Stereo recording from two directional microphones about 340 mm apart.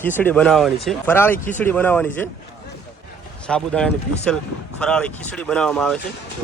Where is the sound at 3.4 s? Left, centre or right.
Centre.